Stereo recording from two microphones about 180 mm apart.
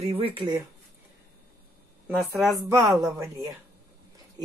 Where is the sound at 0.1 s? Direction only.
30° right (ahead or behind).